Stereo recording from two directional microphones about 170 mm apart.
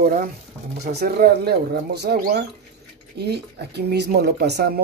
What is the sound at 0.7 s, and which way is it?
Speech, 75° right (ahead or behind).